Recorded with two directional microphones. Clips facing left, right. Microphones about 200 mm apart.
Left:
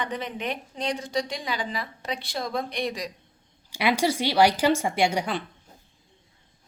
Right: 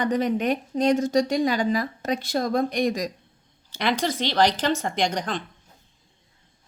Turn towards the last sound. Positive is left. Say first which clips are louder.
# left 1 dB
turn(degrees=10)  # may be behind; listen again after turning